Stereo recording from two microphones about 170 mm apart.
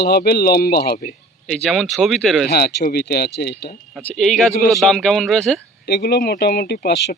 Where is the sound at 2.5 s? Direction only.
70° left (ahead or behind).